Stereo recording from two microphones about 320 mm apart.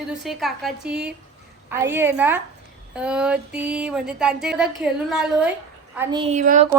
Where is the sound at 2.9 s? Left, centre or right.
Centre.